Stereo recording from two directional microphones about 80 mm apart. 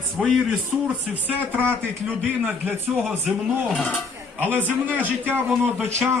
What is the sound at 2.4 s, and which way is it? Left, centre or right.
Speech, right.